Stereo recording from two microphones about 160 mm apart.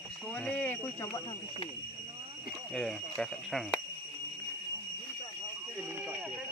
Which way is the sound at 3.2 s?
Centre (ahead or behind).